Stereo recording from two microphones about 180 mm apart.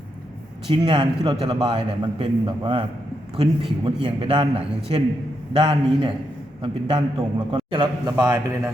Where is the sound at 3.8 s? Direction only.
30° right (ahead or behind).